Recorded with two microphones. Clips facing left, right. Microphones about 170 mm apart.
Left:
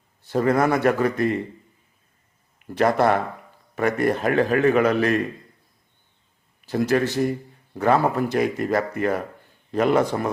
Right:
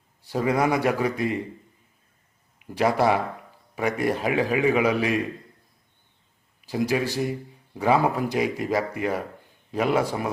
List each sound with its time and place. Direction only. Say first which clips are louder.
0.3 s a man's voice: left 3 dB; 10° right (ahead or behind)
2.6 s a man's voice: left 2 dB; 10° right (ahead or behind)
6.7 s a man's voice: left 3 dB; 10° right (ahead or behind)